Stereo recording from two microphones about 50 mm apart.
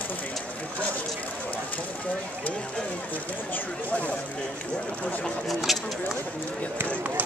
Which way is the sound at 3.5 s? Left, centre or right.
Left.